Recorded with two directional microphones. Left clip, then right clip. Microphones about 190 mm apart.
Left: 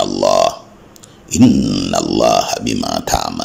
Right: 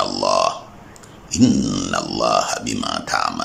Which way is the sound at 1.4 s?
5° left (ahead or behind).